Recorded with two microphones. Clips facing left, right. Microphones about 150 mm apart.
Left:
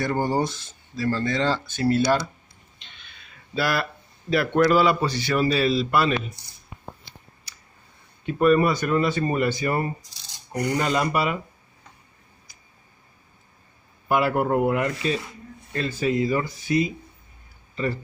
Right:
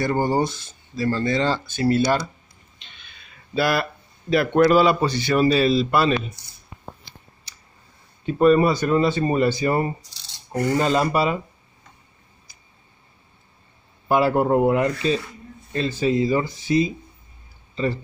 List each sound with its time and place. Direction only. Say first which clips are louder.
0.0 s speech: right 3 dB; 10° right (ahead or behind)
3.5 s a man's voice: right 3 dB; 20° right (ahead or behind)
8.3 s a man's voice: right 3 dB; 30° right (ahead or behind)
10.5 s speech: right 3 dB; 15° left (ahead or behind)
10.8 s a man's voice: right 3 dB; 30° right (ahead or behind)
14.0 s a man's voice: right 3 dB; 30° right (ahead or behind)